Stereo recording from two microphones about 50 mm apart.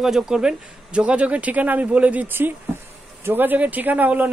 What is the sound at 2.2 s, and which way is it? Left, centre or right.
Speech, right.